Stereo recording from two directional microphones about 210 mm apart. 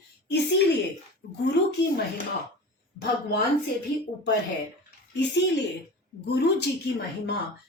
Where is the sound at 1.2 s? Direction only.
45° left (ahead or behind).